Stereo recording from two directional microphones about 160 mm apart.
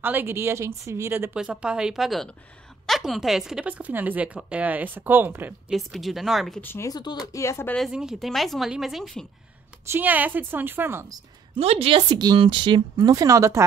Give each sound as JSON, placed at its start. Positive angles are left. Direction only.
{"t": 0.0, "sound": "a woman's voice", "side_deg": -10}
{"t": 1.3, "sound": "a woman's voice", "side_deg": -5}
{"t": 5.8, "sound": "speech", "side_deg": 0}
{"t": 6.6, "sound": "speech", "side_deg": 15}
{"t": 7.7, "sound": "speech", "side_deg": 0}
{"t": 9.8, "sound": "a woman's voice", "side_deg": -10}
{"t": 11.6, "sound": "a woman's voice", "side_deg": -40}
{"t": 12.1, "sound": "speech", "side_deg": -25}